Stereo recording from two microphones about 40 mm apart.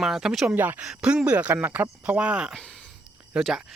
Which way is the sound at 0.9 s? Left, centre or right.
Right.